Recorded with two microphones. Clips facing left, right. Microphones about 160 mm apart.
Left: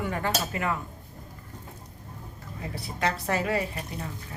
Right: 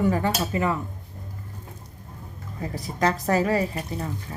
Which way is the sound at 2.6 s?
40° right (ahead or behind).